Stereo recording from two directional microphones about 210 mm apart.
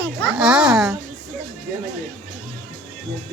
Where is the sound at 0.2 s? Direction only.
5° right (ahead or behind).